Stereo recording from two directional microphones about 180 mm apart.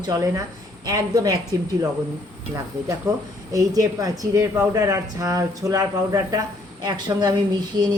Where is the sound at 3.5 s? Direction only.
20° right (ahead or behind).